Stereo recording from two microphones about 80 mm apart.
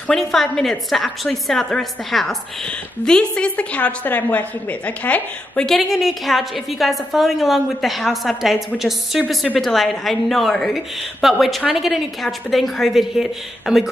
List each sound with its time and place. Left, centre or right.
0.1 s a woman's voice: centre
5.7 s a woman's voice: centre